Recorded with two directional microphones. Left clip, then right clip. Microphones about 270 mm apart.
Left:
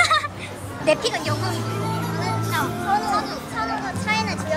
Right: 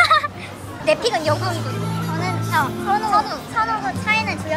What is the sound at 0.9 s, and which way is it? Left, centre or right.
Speech, centre.